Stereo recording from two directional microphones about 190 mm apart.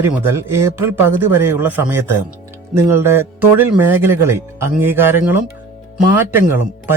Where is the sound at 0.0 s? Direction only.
10° right (ahead or behind).